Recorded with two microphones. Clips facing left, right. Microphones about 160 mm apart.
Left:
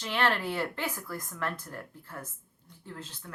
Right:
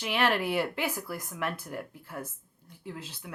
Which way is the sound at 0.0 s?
15° right (ahead or behind).